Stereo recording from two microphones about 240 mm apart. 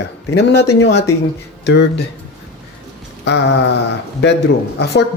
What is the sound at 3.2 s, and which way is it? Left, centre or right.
Speech, left.